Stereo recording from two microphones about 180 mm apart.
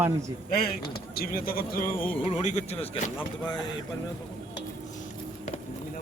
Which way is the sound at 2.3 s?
40° left (ahead or behind).